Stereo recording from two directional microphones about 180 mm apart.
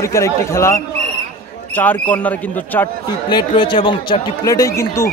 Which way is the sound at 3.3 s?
25° left (ahead or behind).